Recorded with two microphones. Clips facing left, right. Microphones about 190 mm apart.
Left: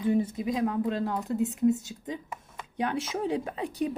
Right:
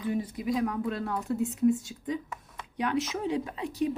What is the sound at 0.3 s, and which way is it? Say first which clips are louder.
Speech: left 1 dB; 25° left (ahead or behind).